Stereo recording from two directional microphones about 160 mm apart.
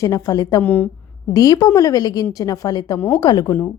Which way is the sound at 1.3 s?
25° left (ahead or behind).